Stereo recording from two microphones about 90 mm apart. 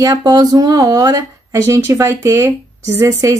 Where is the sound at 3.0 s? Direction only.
35° right (ahead or behind).